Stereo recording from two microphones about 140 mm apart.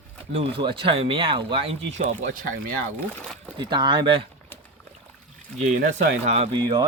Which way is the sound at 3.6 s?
35° right (ahead or behind).